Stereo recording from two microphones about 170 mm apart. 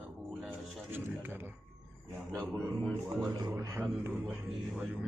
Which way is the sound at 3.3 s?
20° right (ahead or behind).